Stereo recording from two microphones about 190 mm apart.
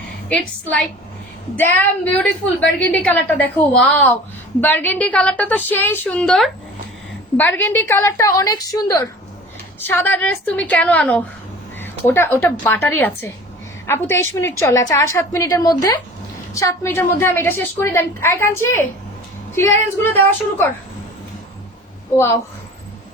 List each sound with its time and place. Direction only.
0.3 s a woman's voice: 5° left (ahead or behind)